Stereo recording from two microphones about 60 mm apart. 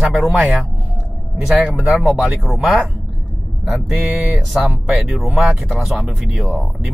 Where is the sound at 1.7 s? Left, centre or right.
Centre.